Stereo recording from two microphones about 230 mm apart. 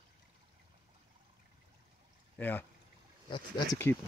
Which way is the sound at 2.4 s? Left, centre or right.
Centre.